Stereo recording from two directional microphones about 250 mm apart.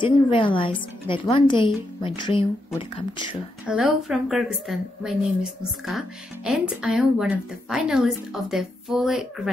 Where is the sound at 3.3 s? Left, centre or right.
Centre.